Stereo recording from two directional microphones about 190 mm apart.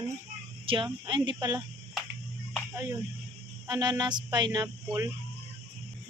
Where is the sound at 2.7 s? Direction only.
15° right (ahead or behind).